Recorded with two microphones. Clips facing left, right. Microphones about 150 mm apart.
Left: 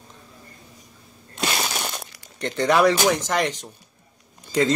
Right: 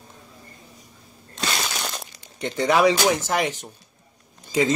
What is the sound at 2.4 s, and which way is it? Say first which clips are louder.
Speech: even; 15° right (ahead or behind).